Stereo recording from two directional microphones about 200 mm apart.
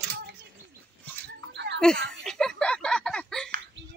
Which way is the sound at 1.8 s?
5° left (ahead or behind).